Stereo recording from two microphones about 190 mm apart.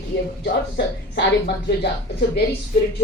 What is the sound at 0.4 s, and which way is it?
Speech, 60° left (ahead or behind).